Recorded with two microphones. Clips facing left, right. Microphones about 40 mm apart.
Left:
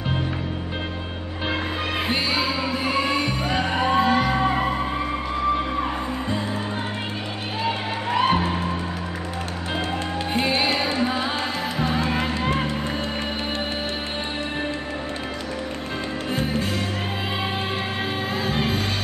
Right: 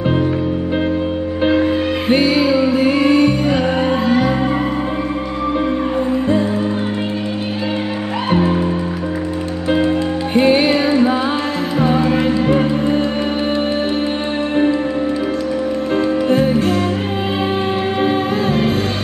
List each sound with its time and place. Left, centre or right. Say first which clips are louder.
1.5 s music: right 9 dB; centre
8.3 s music: right 6 dB; centre
10.3 s music: right 10 dB; centre
16.3 s music: right 8 dB; centre